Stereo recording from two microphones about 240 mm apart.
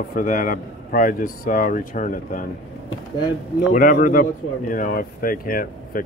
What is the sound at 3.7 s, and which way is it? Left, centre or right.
Speech, left.